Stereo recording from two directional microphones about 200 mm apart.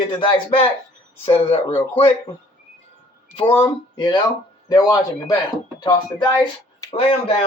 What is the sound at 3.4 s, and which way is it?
Speech, 25° left (ahead or behind).